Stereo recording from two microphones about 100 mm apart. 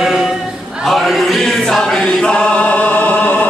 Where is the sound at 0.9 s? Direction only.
Centre (ahead or behind).